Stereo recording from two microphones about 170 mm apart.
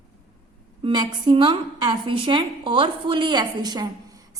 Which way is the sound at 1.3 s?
30° right (ahead or behind).